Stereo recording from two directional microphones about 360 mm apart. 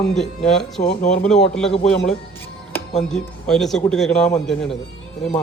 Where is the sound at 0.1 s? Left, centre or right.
Centre.